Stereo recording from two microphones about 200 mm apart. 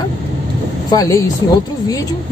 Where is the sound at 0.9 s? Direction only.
15° left (ahead or behind).